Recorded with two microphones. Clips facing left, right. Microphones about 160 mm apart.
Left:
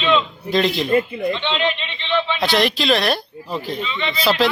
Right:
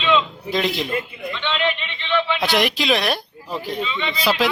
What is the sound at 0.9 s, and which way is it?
Speech, 45° left (ahead or behind).